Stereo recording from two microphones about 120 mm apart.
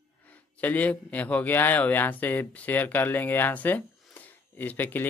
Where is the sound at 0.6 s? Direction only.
15° left (ahead or behind).